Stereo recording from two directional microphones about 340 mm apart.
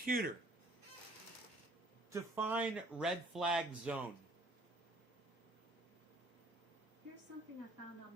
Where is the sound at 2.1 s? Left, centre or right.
Centre.